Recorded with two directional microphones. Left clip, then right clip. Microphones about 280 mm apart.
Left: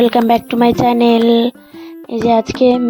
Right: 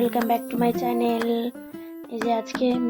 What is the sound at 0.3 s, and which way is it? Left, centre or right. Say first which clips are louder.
A woman's voice: left 11 dB; left.